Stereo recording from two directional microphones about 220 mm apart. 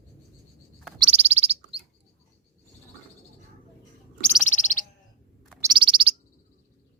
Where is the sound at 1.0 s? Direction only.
30° right (ahead or behind).